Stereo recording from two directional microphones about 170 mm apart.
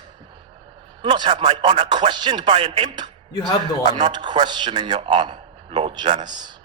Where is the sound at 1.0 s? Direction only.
30° right (ahead or behind).